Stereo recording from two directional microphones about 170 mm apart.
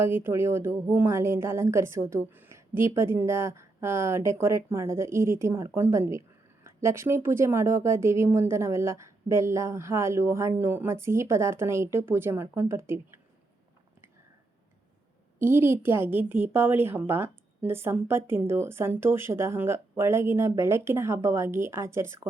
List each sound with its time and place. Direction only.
0.0 s a woman's voice: 15° right (ahead or behind)
15.4 s a woman's voice: 15° right (ahead or behind)